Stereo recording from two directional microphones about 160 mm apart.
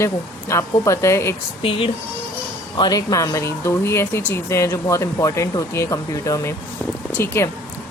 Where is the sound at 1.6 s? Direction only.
35° left (ahead or behind).